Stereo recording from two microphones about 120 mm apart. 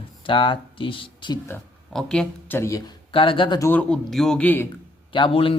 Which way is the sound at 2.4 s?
20° left (ahead or behind).